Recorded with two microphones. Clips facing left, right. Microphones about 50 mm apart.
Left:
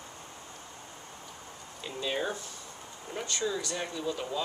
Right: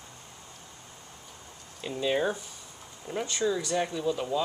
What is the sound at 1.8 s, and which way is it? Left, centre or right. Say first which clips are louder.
Speech: right 5 dB; centre.